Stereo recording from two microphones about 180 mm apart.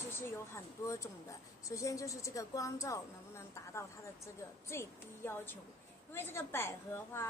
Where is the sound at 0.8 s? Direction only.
15° left (ahead or behind).